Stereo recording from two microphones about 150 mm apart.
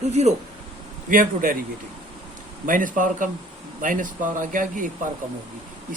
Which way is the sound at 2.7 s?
60° right (ahead or behind).